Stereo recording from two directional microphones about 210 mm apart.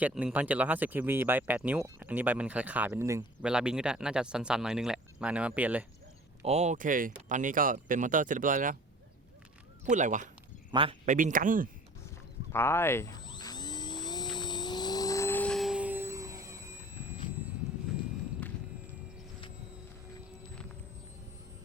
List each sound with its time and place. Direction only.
0.0 s speech: 5° right (ahead or behind)
6.4 s speech: 30° right (ahead or behind)
9.9 s speech: 35° right (ahead or behind)
10.7 s speech: 25° right (ahead or behind); by 11.7 s 40° right (ahead or behind)
12.5 s a sound: 10° left (ahead or behind); by 16.7 s 15° right (ahead or behind)
17.9 s a sound: centre (ahead or behind)